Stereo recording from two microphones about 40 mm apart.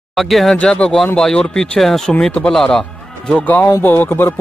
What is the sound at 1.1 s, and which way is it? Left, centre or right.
Speech, centre.